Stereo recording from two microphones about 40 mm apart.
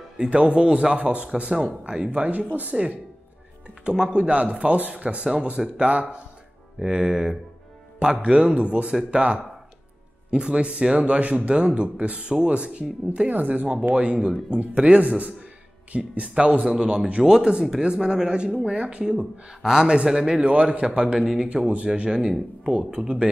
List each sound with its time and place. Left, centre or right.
0.2 s speech: right
0.9 s speech: right
3.8 s speech: right
6.8 s speech: centre
8.2 s speech: right
8.5 s speech: right
9.1 s speech: right
13.3 s speech: right
13.9 s a man's voice: right
20.4 s speech: right